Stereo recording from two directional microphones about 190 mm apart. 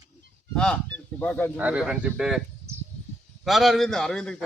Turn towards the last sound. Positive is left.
turn(degrees=5)  # may be behind; listen again after turning